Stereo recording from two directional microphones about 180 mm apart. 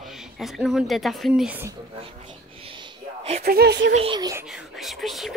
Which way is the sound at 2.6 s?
30° right (ahead or behind).